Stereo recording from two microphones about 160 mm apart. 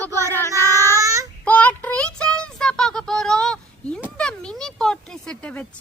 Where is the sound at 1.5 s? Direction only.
10° left (ahead or behind).